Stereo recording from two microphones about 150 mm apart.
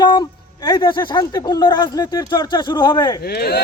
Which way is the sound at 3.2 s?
90° left.